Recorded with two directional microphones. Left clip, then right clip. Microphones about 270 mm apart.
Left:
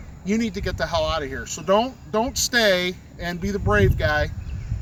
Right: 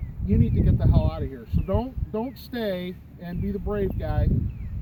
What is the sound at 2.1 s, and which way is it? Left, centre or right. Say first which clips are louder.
Speech: left 11 dB; centre.